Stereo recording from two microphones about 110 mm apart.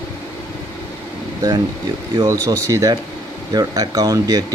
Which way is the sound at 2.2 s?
30° right (ahead or behind).